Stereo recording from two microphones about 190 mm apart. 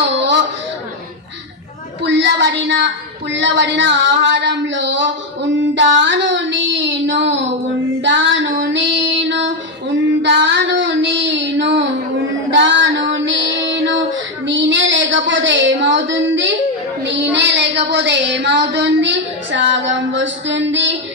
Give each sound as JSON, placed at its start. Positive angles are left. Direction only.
{"t": 2.0, "sound": "a woman's voice", "side_deg": -65}
{"t": 8.0, "sound": "female singing", "side_deg": -70}
{"t": 10.4, "sound": "child singing", "side_deg": -70}
{"t": 12.4, "sound": "female singing", "side_deg": -70}
{"t": 14.4, "sound": "a sound", "side_deg": -75}
{"t": 17.0, "sound": "a woman's voice", "side_deg": -70}